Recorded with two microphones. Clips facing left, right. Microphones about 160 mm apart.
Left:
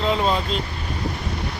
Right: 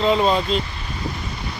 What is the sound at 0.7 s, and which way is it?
Vehicle, 55° left (ahead or behind).